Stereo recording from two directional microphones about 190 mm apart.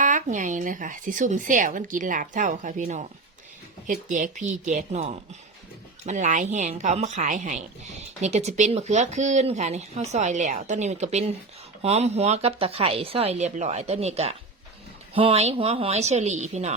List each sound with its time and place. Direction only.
0.0 s speech: 40° right (ahead or behind)